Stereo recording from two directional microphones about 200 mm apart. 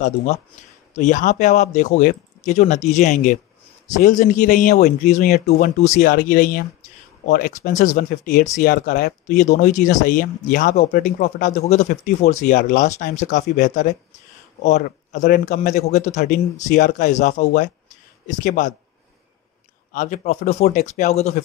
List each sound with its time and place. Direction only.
0.9 s speech: 40° left (ahead or behind)
19.9 s speech: 40° left (ahead or behind)